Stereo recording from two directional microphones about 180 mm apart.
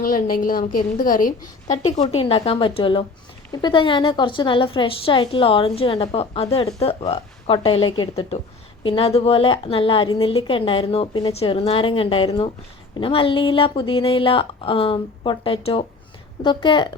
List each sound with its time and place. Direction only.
0.0 s a woman's voice: 50° left (ahead or behind)
1.6 s a woman's voice: 40° left (ahead or behind)